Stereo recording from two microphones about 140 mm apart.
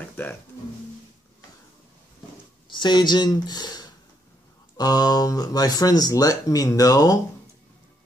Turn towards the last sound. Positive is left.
turn(degrees=25)  # may be behind; listen again after turning